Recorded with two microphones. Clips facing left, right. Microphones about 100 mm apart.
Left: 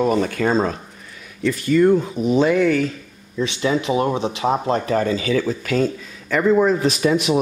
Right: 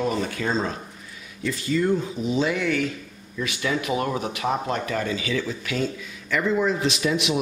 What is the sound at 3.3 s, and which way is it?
Speech, 25° left (ahead or behind).